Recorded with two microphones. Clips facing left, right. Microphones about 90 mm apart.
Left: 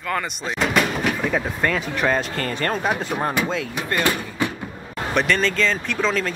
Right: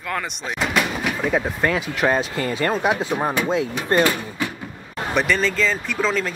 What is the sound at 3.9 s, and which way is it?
Speech, 30° right (ahead or behind).